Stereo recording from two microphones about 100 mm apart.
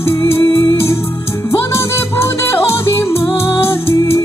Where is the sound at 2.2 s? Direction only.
25° left (ahead or behind).